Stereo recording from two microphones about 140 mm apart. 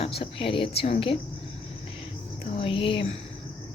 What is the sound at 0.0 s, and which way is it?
Speech, 40° left (ahead or behind).